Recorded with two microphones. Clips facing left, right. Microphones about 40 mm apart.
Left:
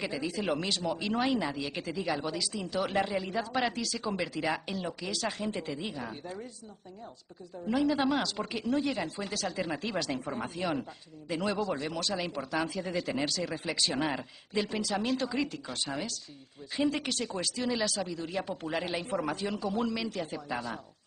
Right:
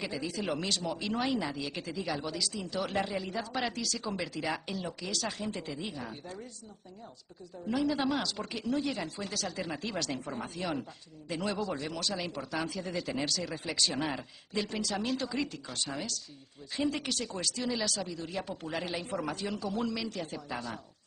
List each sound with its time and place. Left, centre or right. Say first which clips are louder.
0.0 s speech: left 2 dB; left
0.3 s a man's voice: left 2 dB; centre
7.6 s a man's voice: left 2 dB; centre